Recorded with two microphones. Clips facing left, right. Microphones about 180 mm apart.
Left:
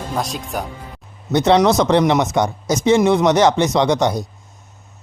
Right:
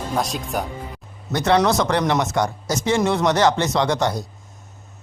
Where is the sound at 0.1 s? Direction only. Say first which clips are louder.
Even; centre (ahead or behind).